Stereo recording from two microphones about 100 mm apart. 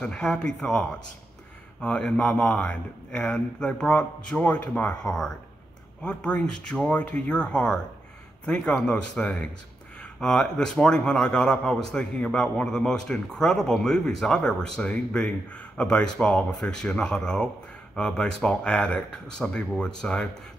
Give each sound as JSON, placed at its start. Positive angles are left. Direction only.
{"t": 0.0, "sound": "speech", "side_deg": 10}